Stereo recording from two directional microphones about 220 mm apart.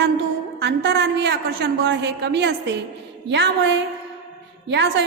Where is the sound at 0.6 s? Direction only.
50° right (ahead or behind).